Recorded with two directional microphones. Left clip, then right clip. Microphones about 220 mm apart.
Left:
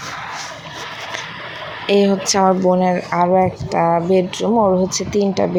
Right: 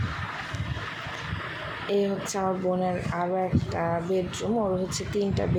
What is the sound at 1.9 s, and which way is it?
Speech, 25° left (ahead or behind).